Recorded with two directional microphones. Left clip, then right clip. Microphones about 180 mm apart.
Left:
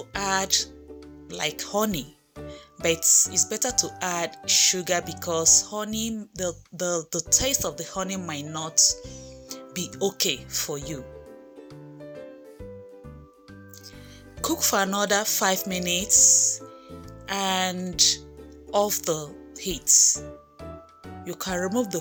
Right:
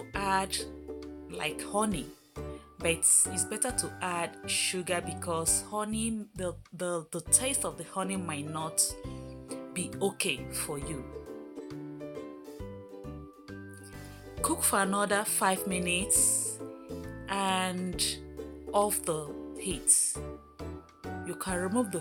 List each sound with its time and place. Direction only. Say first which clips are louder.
0.1 s music: left 5 dB; 25° left (ahead or behind)
1.3 s speech: left 6 dB; 25° left (ahead or behind)
9.5 s music: left 4 dB; 20° left (ahead or behind)
10.0 s speech: left 6 dB; 20° left (ahead or behind)
14.4 s speech: left 5 dB; 20° left (ahead or behind)
21.2 s speech: left 6 dB; 25° left (ahead or behind)